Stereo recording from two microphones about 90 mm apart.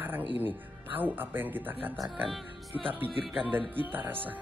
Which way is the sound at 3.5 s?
20° right (ahead or behind).